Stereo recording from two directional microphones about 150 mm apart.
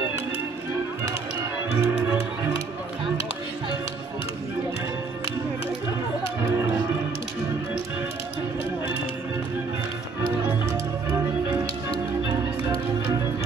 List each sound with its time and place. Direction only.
1.7 s music: 15° right (ahead or behind)
6.4 s music: 15° right (ahead or behind)
10.7 s music: 20° right (ahead or behind)